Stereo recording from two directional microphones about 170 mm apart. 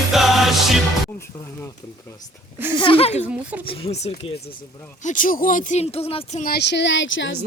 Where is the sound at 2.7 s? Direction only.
30° left (ahead or behind).